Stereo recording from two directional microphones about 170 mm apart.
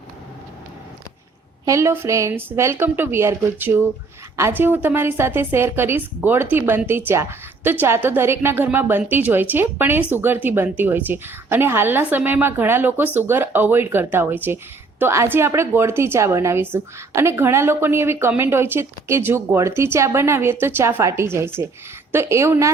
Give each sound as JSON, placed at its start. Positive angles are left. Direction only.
{"t": 1.6, "sound": "speech", "side_deg": -15}